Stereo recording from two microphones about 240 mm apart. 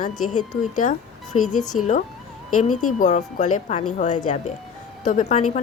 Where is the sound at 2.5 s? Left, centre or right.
Left.